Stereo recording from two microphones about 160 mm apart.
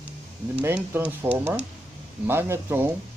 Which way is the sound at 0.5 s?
10° right (ahead or behind).